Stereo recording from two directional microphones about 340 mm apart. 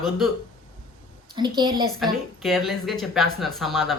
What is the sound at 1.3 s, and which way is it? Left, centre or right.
Speech, centre.